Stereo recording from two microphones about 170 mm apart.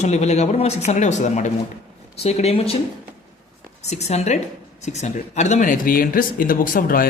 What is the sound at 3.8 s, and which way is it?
Speech, 40° left (ahead or behind).